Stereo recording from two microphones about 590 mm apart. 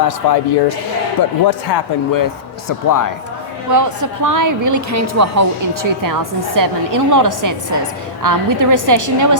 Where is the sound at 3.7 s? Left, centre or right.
Right.